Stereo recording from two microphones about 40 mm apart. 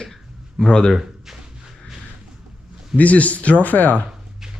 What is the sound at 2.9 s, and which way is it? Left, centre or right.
Speech, left.